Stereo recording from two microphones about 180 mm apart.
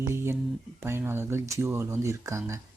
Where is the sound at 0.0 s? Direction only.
15° right (ahead or behind).